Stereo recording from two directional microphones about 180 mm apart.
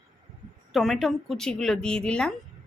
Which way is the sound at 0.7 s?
Centre (ahead or behind).